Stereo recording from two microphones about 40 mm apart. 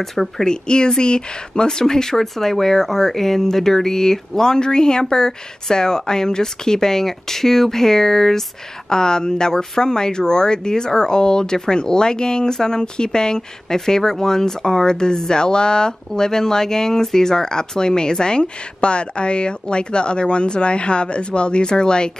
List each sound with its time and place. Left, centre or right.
0.0 s speech: centre
0.5 s speech: left